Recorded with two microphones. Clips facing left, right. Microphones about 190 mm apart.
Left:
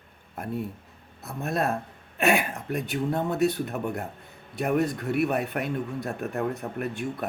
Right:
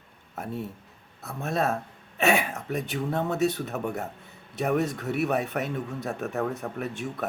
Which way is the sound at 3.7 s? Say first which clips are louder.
Even; centre (ahead or behind).